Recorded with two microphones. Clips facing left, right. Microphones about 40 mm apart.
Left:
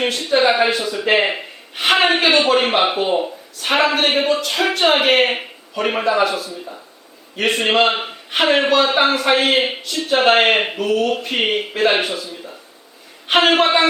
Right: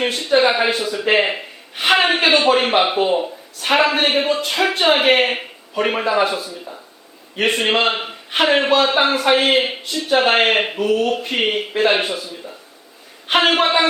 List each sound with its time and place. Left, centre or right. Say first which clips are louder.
0.2 s a man's voice: even; centre
4.4 s a man's voice: even; centre
6.2 s speech: left 1 dB; centre
6.5 s a man's voice: left 1 dB; centre
7.3 s a man's voice: even; centre
7.6 s a man's voice: left 2 dB; centre
13.2 s a man's voice: left 1 dB; centre